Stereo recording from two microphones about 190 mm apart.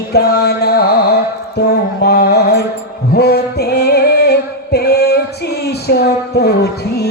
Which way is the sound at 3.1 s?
55° left (ahead or behind).